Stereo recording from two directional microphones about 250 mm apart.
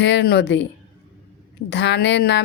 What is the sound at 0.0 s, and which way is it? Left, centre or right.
Speech, left.